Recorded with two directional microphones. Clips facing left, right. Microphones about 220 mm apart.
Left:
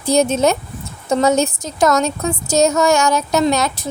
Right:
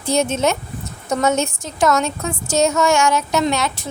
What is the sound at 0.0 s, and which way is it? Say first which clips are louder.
A woman's voice: left 4 dB; 35° left (ahead or behind).